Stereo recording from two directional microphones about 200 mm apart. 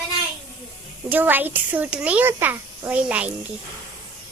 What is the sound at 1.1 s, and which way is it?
Speech, 10° right (ahead or behind).